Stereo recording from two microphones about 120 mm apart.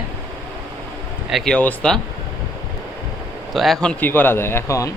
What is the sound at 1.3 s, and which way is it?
Speech, 5° left (ahead or behind).